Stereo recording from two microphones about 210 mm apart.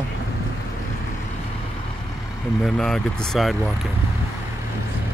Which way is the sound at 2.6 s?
Centre (ahead or behind).